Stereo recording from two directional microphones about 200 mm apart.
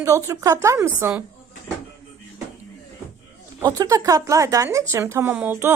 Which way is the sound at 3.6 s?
15° right (ahead or behind).